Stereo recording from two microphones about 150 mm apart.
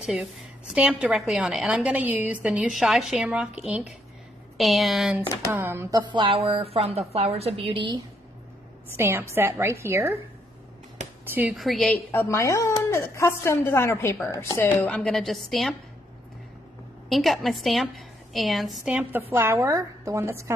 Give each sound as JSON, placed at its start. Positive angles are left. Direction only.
{"t": 0.0, "sound": "a woman's voice", "side_deg": -5}
{"t": 5.5, "sound": "a woman's voice", "side_deg": -15}
{"t": 8.9, "sound": "a woman's voice", "side_deg": -15}
{"t": 11.5, "sound": "a woman's voice", "side_deg": 0}
{"t": 12.1, "sound": "a woman's voice", "side_deg": 15}
{"t": 15.0, "sound": "a woman's voice", "side_deg": 5}
{"t": 17.1, "sound": "a woman's voice", "side_deg": 0}